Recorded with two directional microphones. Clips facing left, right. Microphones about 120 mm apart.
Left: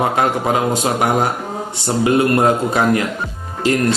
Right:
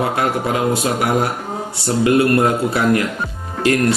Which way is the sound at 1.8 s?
25° left (ahead or behind).